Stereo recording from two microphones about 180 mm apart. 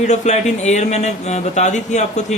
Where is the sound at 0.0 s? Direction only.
40° left (ahead or behind).